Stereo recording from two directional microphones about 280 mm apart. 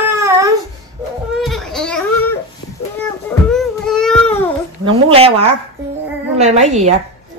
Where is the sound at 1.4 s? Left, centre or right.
Centre.